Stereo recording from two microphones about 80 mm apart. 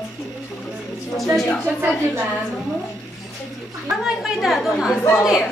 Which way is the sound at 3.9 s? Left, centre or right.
Centre.